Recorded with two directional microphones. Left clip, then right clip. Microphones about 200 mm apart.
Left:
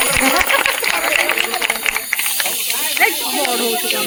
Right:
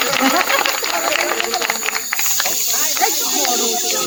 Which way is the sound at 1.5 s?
10° left (ahead or behind).